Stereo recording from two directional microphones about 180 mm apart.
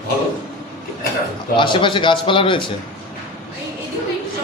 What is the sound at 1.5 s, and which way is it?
Speech, 25° left (ahead or behind).